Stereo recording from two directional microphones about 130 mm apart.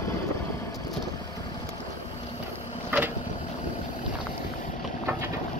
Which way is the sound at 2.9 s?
15° right (ahead or behind).